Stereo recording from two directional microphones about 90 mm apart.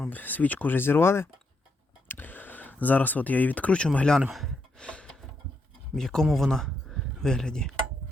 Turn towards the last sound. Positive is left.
turn(degrees=10)  # may be behind; listen again after turning